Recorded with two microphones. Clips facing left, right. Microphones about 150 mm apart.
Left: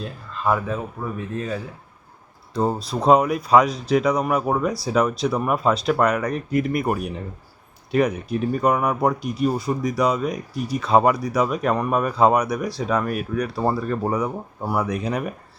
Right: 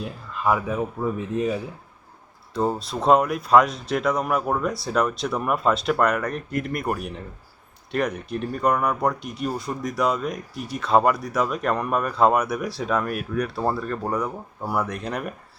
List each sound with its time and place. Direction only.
0.0 s speech: 10° right (ahead or behind)
2.6 s speech: centre (ahead or behind)